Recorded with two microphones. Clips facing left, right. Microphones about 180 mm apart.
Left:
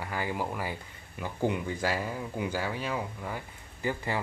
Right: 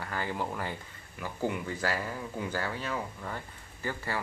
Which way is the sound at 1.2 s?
20° left (ahead or behind).